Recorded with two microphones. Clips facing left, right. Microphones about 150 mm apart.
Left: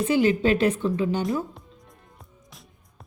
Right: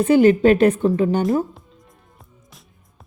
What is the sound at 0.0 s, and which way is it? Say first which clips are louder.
A woman's voice: right 7 dB; 50° right (ahead or behind).